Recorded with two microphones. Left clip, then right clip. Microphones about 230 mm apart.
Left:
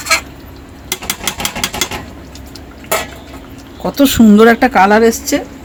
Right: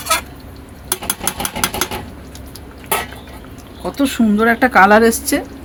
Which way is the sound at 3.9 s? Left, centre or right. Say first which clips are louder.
Left 8 dB; left.